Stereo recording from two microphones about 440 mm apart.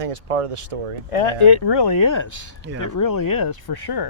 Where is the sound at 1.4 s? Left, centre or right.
Left.